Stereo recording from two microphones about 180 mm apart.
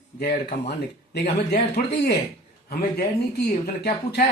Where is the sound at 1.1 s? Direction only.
65° left (ahead or behind).